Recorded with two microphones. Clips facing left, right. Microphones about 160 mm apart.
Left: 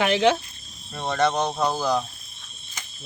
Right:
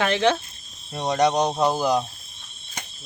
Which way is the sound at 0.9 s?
20° right (ahead or behind).